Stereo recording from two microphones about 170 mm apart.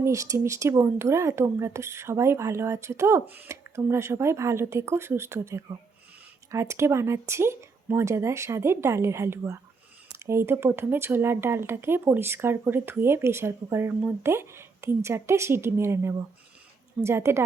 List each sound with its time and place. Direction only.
0.0 s speech: 20° right (ahead or behind)